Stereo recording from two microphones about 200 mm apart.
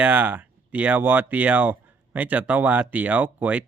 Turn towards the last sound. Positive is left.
turn(degrees=-10)  # may be behind; listen again after turning